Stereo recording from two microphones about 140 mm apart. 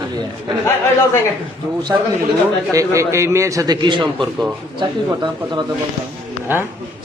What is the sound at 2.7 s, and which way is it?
A man's voice, 20° right (ahead or behind).